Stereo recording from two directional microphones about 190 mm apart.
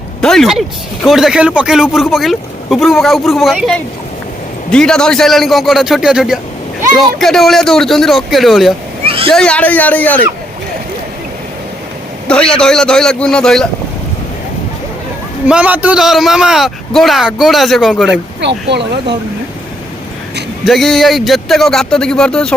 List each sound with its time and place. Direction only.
0.2 s speech: 5° left (ahead or behind)
9.0 s speech: 30° right (ahead or behind)
9.3 s a man's voice: 5° left (ahead or behind)
12.3 s speech: 5° left (ahead or behind)
15.4 s speech: 5° right (ahead or behind)
18.1 s speech: 65° right (ahead or behind)
20.7 s speech: centre (ahead or behind)